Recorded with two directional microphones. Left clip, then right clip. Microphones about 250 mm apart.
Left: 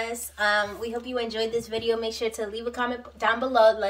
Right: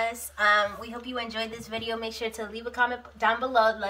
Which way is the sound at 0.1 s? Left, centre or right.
Centre.